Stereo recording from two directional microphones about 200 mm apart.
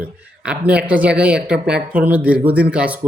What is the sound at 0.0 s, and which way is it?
Speech, 5° right (ahead or behind).